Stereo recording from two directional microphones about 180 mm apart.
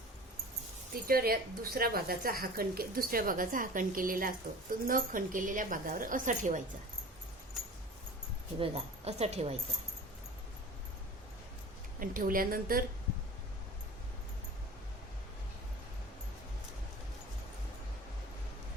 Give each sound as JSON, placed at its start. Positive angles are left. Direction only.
{"t": 1.0, "sound": "a woman's voice", "side_deg": -55}
{"t": 8.5, "sound": "speech", "side_deg": -30}
{"t": 11.9, "sound": "speech", "side_deg": -50}